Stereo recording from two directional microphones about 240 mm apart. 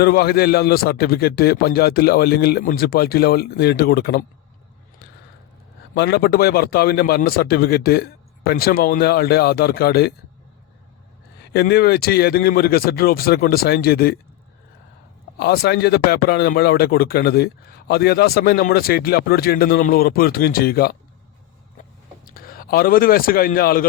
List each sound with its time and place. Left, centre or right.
0.0 s speech: left
5.9 s speech: left
11.5 s speech: left
15.4 s speech: left
22.2 s a man's voice: left